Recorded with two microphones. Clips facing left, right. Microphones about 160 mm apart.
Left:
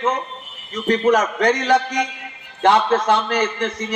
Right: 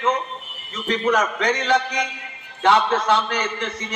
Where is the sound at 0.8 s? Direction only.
45° left (ahead or behind).